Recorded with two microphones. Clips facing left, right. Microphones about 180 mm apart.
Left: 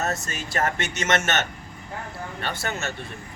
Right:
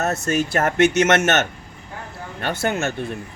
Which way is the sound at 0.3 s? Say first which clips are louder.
Right 7 dB; 60° right (ahead or behind).